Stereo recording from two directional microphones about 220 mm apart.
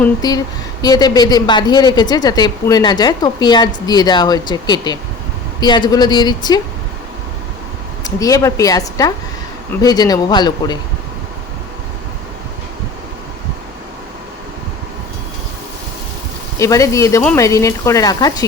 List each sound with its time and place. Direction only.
0.0 s speech: 15° left (ahead or behind)
8.0 s speech: 15° left (ahead or behind)
16.6 s speech: 15° left (ahead or behind)